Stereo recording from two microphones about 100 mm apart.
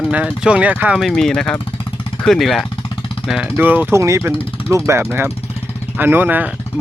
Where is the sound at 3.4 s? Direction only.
20° right (ahead or behind).